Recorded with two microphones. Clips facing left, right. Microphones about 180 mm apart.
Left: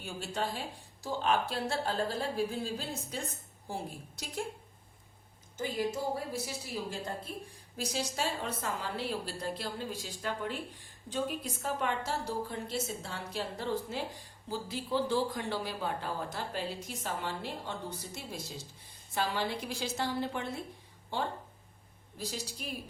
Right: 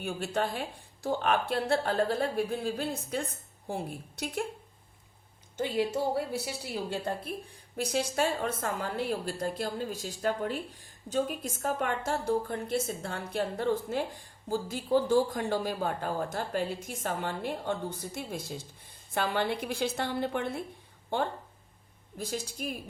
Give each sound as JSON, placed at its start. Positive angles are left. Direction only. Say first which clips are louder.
{"t": 0.0, "sound": "speech", "louder": "right 5 dB", "side_deg": -60}
{"t": 5.5, "sound": "a woman's voice", "louder": "right 4 dB", "side_deg": -65}
{"t": 7.8, "sound": "speech", "louder": "right 6 dB", "side_deg": -55}